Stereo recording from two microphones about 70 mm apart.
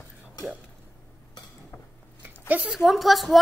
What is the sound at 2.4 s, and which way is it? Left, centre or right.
Speech, right.